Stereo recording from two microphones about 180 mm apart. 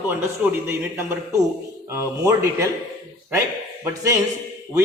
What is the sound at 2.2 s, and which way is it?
Speech, 15° right (ahead or behind).